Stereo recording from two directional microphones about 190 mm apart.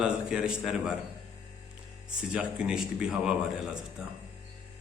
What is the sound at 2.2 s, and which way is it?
A man's voice, 5° right (ahead or behind).